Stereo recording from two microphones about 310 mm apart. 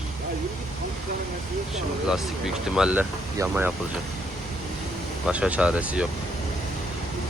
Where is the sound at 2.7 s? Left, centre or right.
Centre.